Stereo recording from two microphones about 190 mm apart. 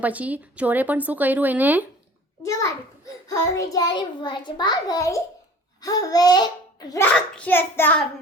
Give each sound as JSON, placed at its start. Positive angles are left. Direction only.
{"t": 0.0, "sound": "speech", "side_deg": -5}
{"t": 2.4, "sound": "child singing", "side_deg": 15}
{"t": 3.2, "sound": "a child's voice", "side_deg": 15}
{"t": 7.1, "sound": "child singing", "side_deg": 5}